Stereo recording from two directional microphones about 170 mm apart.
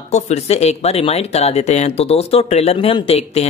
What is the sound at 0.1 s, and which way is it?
Speech, 40° left (ahead or behind).